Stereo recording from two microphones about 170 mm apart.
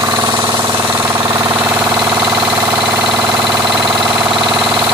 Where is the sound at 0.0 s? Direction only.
20° right (ahead or behind).